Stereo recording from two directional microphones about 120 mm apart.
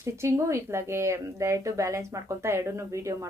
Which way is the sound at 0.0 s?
25° right (ahead or behind).